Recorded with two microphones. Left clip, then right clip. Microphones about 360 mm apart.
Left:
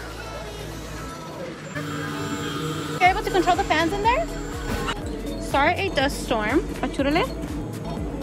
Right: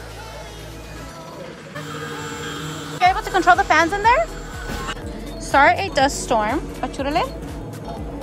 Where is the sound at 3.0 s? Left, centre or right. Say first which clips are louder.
Right 3 dB; centre.